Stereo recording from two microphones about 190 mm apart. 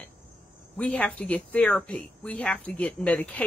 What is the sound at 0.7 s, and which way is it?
Speech, 5° left (ahead or behind).